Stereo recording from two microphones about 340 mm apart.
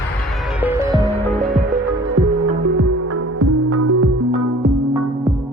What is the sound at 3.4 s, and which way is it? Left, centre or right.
Music, right.